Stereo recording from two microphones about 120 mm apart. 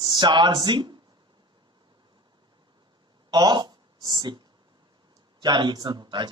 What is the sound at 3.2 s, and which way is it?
A man's voice, 35° right (ahead or behind).